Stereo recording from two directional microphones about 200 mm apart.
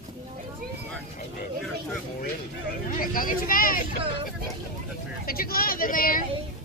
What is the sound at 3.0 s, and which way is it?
Speech, 45° left (ahead or behind).